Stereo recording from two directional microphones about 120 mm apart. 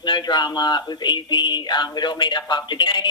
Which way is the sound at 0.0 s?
40° left (ahead or behind).